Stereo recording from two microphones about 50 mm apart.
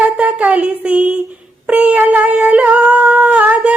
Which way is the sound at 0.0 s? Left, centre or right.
Right.